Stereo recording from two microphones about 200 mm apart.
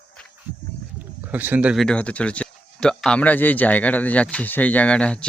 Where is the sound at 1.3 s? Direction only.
10° right (ahead or behind).